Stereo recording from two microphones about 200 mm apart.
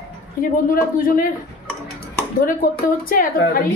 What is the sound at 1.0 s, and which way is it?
Speech, 45° left (ahead or behind).